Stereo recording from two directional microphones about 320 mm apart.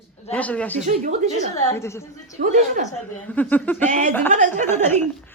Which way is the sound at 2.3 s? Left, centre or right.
Right.